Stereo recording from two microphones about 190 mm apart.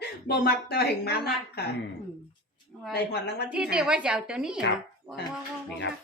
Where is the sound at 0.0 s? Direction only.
60° left (ahead or behind).